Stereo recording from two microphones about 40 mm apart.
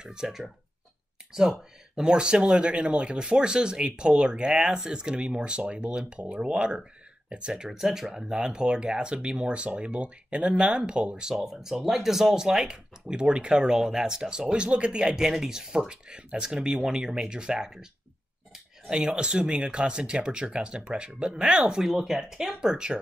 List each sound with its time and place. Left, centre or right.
0.0 s speech: centre
15.1 s speech: centre
21.8 s speech: centre